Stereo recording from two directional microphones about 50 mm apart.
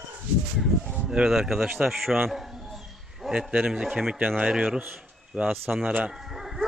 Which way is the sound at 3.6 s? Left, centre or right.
Centre.